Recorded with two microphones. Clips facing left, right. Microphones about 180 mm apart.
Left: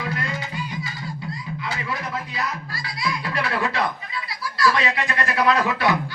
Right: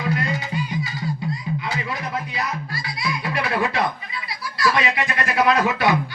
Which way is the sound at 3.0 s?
15° right (ahead or behind).